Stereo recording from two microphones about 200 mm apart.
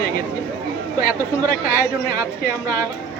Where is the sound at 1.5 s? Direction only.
45° left (ahead or behind).